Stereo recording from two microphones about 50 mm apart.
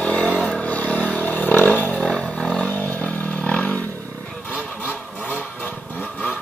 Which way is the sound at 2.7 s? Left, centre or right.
Left.